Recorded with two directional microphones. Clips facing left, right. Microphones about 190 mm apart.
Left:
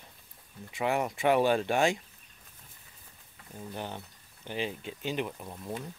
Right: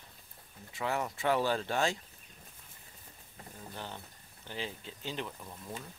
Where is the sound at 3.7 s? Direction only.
15° left (ahead or behind).